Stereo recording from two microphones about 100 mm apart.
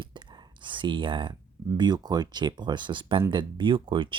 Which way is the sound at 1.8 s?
45° right (ahead or behind).